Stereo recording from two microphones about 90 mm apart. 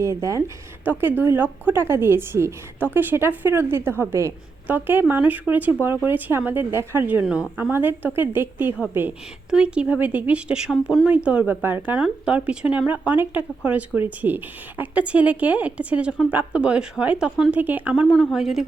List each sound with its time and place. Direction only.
0.0 s a woman's voice: 35° right (ahead or behind)
0.9 s a woman's voice: 20° right (ahead or behind)
7.2 s a woman's voice: 10° right (ahead or behind)
9.5 s a woman's voice: 10° right (ahead or behind)
17.6 s a woman's voice: 20° right (ahead or behind)
18.1 s speech: centre (ahead or behind)